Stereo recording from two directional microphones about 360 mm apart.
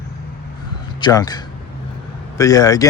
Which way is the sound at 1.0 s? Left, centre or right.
Centre.